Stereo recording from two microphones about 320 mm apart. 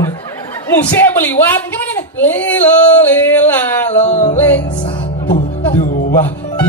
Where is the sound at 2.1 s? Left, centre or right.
Centre.